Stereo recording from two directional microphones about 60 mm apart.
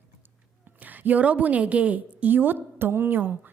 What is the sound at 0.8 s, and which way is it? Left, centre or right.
A woman's voice, right.